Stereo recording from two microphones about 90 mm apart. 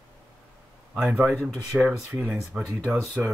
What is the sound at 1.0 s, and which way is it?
Speech, 25° right (ahead or behind).